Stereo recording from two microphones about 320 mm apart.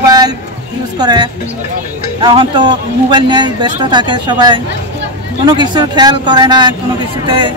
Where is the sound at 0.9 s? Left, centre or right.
Centre.